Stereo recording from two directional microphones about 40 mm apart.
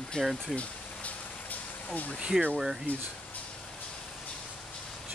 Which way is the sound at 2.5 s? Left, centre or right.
Centre.